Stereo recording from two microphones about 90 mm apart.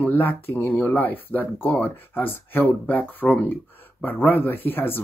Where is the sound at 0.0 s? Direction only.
20° left (ahead or behind).